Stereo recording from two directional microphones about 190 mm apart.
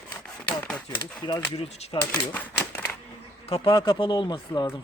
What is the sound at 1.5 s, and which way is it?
Speech, 25° left (ahead or behind).